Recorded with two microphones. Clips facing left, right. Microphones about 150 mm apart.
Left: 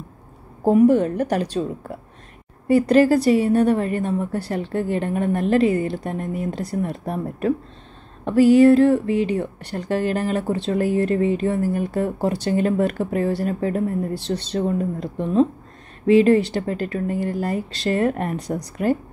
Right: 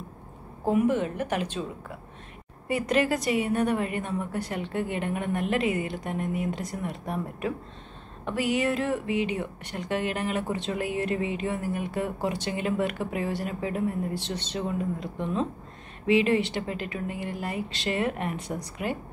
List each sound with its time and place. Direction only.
0.7 s speech: 35° left (ahead or behind)
2.7 s speech: 35° left (ahead or behind)